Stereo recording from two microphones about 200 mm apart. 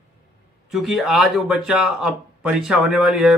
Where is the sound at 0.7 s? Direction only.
Centre (ahead or behind).